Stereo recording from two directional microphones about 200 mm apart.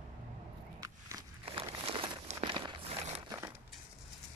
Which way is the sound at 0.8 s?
15° right (ahead or behind).